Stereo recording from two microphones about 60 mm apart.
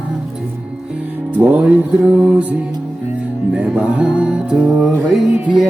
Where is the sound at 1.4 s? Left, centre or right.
Right.